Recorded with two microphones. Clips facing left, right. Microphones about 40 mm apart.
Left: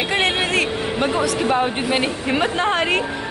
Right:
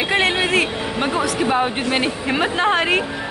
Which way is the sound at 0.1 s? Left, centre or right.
Centre.